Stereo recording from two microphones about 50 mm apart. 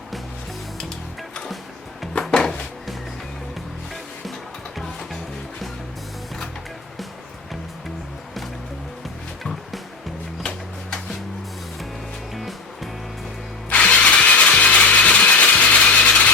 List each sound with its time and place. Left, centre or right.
2.3 s music: centre
12.3 s music: centre
13.7 s music: left